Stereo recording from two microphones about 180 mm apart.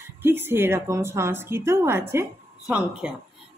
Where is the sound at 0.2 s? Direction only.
10° right (ahead or behind).